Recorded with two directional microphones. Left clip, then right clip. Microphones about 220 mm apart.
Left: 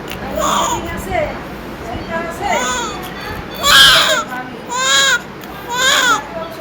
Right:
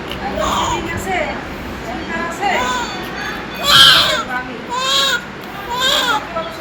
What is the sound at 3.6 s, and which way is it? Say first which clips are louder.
Baby cry: left 1 dB; 20° left (ahead or behind).